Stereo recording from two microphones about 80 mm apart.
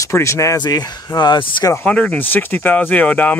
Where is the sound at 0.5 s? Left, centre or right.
Left.